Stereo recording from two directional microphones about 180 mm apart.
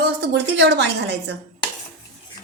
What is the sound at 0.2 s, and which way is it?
A woman's voice, 70° right (ahead or behind).